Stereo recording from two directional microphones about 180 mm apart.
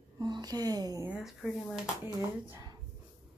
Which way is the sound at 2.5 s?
20° right (ahead or behind).